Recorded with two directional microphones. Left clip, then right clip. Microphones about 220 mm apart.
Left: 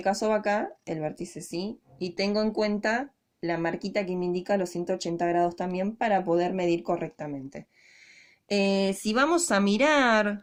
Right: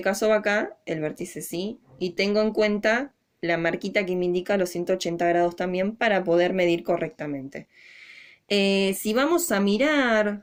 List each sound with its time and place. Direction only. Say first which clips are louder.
0.0 s speech: right 4 dB; 25° left (ahead or behind)
2.1 s speech: right 4 dB; 30° left (ahead or behind)